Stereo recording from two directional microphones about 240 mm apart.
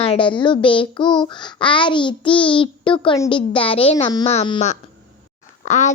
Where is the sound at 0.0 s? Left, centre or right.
Left.